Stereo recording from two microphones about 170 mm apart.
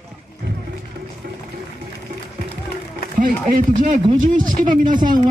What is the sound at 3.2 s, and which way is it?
Speech, 50° right (ahead or behind).